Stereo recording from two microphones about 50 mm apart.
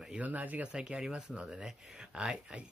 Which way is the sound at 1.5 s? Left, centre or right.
Centre.